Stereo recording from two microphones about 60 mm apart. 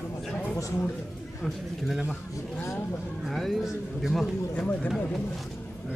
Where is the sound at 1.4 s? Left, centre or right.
Centre.